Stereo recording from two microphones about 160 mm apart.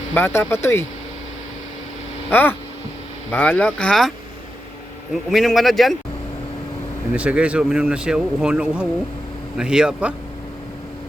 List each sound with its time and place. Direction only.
0.1 s speech: 15° left (ahead or behind)
2.3 s speech: 10° left (ahead or behind)
5.3 s speech: centre (ahead or behind)
7.1 s speech: 5° right (ahead or behind)